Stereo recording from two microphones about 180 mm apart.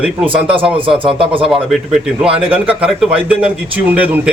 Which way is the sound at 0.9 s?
30° right (ahead or behind).